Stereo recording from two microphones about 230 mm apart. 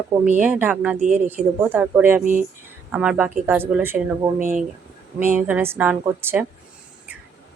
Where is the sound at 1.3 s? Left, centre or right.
Centre.